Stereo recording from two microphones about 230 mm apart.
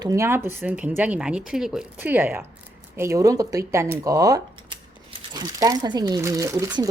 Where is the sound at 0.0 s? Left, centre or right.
Centre.